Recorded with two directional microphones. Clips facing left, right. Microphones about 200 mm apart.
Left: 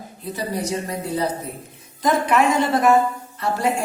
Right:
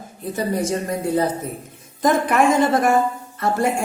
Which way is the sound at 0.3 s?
50° right (ahead or behind).